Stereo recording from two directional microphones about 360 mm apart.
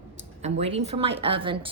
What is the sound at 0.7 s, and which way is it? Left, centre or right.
Speech, centre.